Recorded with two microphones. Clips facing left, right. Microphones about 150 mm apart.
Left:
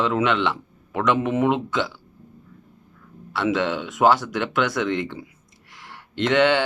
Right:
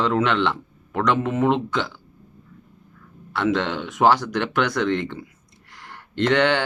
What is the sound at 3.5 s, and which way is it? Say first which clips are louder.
Speech: even; 5° left (ahead or behind).